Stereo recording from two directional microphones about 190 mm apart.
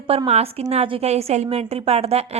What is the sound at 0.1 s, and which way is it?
A woman's voice, 30° right (ahead or behind).